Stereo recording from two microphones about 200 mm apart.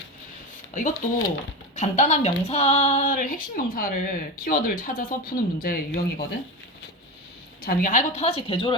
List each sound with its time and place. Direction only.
0.7 s a woman's voice: 40° left (ahead or behind)
7.6 s a woman's voice: 45° left (ahead or behind); by 8.7 s 25° left (ahead or behind)